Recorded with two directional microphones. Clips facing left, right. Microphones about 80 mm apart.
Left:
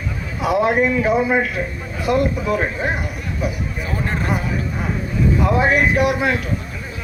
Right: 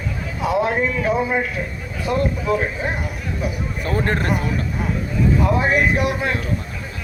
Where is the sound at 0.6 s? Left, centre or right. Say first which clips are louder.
Left 4 dB; left.